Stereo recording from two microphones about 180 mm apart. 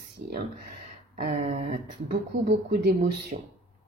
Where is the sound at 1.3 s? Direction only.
40° right (ahead or behind).